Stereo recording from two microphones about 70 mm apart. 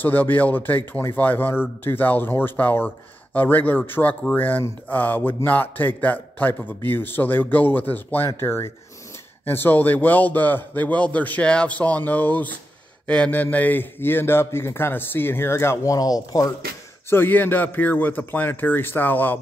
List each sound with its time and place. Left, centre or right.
0.0 s a man's voice: left
15.8 s speech: left
17.1 s a man's voice: left